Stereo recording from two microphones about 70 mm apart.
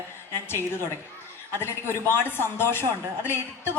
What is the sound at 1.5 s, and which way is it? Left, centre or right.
A woman's voice, left.